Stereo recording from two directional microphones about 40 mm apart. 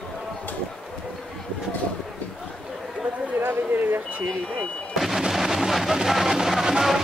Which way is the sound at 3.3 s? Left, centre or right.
Right.